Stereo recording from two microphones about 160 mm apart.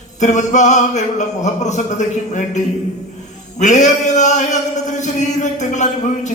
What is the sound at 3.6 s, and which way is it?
A man's voice, 50° left (ahead or behind).